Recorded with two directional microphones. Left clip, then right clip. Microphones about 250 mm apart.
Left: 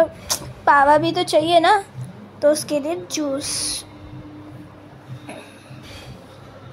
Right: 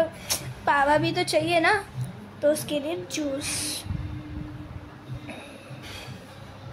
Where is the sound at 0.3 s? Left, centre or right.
Centre.